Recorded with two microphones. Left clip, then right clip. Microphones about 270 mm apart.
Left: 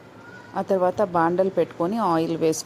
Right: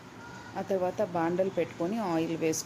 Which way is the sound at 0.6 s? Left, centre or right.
Left.